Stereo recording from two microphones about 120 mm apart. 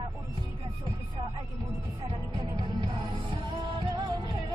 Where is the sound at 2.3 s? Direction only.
40° right (ahead or behind).